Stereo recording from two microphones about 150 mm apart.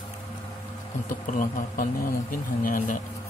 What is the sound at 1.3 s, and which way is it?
Speech, 65° left (ahead or behind).